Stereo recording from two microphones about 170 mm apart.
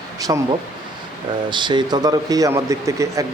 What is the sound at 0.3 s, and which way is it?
Speech, 25° right (ahead or behind).